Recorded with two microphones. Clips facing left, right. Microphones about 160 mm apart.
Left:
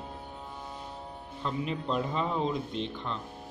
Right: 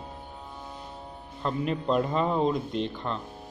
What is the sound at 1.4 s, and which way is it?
Speech, 50° right (ahead or behind).